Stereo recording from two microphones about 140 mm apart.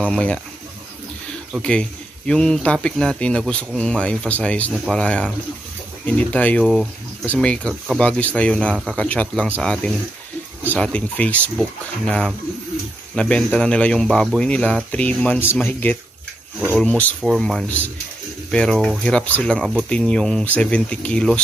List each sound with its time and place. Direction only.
0.0 s speech: 10° left (ahead or behind)
1.6 s speech: 5° left (ahead or behind)